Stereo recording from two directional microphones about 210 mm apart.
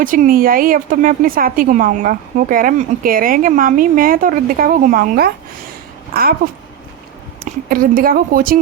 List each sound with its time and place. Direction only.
0.0 s a woman's voice: 40° right (ahead or behind)
7.7 s speech: 45° right (ahead or behind)